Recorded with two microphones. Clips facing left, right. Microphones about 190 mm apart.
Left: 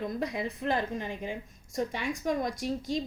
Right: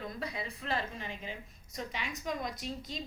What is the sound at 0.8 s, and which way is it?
A woman's voice, 55° left (ahead or behind).